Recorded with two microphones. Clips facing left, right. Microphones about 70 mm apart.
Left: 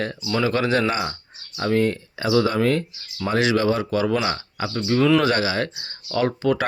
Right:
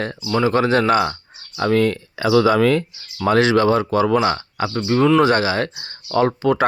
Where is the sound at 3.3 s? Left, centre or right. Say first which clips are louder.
Right 4 dB; right.